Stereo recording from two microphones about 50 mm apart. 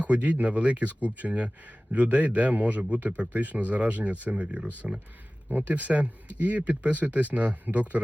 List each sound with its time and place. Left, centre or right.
0.0 s a man's voice: right
4.8 s speech: centre
5.5 s speech: right